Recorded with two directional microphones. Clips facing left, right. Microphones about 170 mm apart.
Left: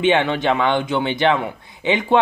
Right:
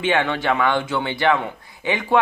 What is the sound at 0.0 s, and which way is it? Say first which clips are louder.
A man's voice: left 3 dB; 20° left (ahead or behind).